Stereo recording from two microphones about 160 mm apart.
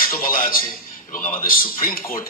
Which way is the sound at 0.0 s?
60° left (ahead or behind).